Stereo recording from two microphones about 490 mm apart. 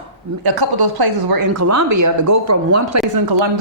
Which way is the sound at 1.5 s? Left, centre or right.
Right.